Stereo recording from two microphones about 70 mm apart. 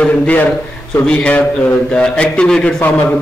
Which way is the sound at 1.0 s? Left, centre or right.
Centre.